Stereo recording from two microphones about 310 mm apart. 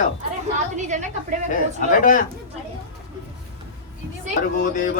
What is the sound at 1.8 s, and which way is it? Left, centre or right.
Speech, left.